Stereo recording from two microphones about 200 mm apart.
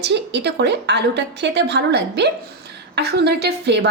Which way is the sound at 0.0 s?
60° right (ahead or behind).